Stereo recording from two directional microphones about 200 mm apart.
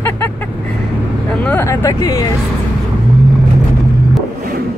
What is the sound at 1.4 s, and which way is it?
Speech, 10° left (ahead or behind).